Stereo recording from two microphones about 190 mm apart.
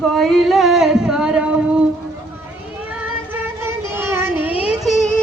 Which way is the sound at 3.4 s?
10° right (ahead or behind).